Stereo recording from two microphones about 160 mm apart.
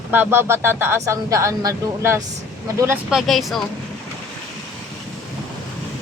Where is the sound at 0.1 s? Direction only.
10° right (ahead or behind).